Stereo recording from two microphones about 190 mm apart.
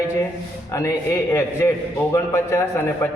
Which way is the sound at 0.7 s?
15° left (ahead or behind).